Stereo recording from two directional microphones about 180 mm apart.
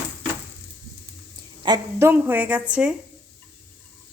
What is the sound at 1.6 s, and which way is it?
Speech, 25° right (ahead or behind).